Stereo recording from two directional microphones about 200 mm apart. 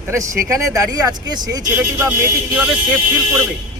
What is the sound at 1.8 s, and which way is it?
Speech, 5° right (ahead or behind).